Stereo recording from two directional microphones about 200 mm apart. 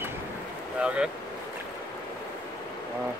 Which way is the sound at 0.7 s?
5° right (ahead or behind).